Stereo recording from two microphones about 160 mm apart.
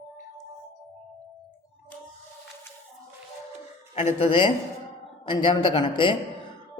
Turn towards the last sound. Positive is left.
turn(degrees=30)  # may be behind; listen again after turning